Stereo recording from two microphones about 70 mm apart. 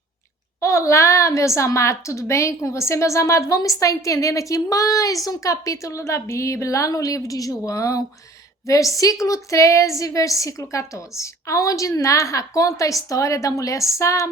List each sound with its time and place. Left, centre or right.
0.6 s a woman's voice: left